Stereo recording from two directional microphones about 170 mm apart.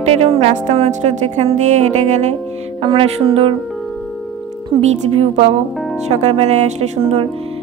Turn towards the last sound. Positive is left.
turn(degrees=-35)  # may be behind; listen again after turning